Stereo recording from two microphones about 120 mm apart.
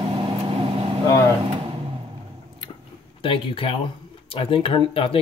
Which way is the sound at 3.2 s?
50° left (ahead or behind).